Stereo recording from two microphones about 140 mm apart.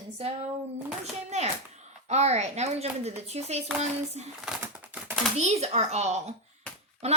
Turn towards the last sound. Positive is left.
turn(degrees=-50)  # may be behind; listen again after turning